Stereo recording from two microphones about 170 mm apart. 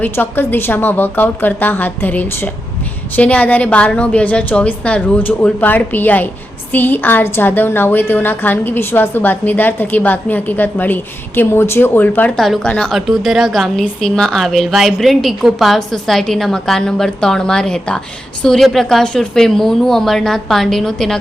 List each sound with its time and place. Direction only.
0.0 s a woman's voice: 10° left (ahead or behind)